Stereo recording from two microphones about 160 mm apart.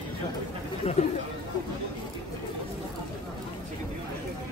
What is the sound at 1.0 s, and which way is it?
Speech, 40° left (ahead or behind).